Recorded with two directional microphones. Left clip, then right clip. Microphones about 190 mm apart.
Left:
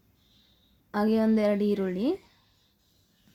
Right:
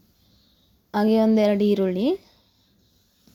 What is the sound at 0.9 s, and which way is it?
A woman's voice, 20° right (ahead or behind).